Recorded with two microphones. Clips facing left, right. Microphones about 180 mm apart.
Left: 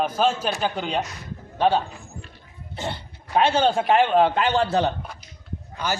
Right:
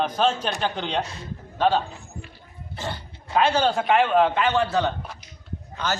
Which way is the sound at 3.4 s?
25° left (ahead or behind).